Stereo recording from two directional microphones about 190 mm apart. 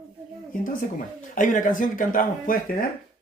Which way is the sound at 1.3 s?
45° left (ahead or behind).